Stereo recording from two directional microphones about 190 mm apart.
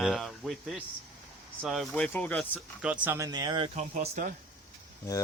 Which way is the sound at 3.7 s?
40° right (ahead or behind).